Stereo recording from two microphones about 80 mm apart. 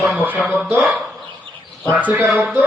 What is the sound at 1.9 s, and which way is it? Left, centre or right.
Speech, centre.